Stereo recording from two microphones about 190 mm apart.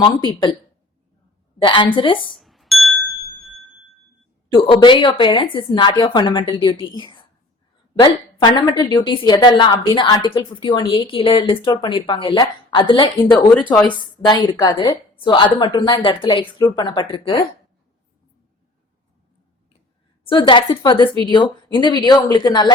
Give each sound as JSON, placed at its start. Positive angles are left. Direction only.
{"t": 0.3, "sound": "a woman's voice", "side_deg": 25}
{"t": 1.6, "sound": "a woman's voice", "side_deg": 25}
{"t": 2.4, "sound": "music", "side_deg": 0}
{"t": 4.5, "sound": "a woman's voice", "side_deg": 25}
{"t": 20.2, "sound": "a woman's voice", "side_deg": 25}